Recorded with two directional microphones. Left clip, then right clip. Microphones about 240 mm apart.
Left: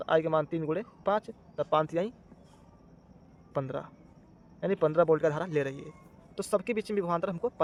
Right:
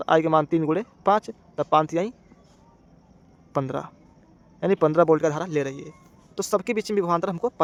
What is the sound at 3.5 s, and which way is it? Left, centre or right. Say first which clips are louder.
Speech: right 7 dB; right.